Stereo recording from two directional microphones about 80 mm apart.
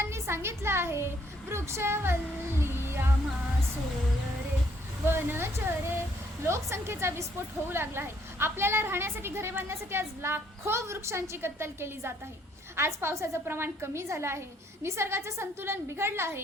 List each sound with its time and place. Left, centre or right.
0.0 s a woman's voice: right
5.0 s a woman's voice: right